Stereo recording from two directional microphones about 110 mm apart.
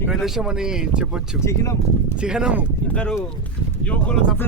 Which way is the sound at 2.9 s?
10° left (ahead or behind).